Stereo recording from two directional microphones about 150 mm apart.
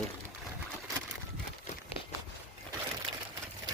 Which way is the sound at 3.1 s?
35° right (ahead or behind).